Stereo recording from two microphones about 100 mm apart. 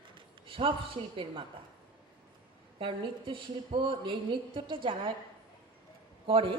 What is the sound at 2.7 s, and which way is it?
Speech, 60° right (ahead or behind).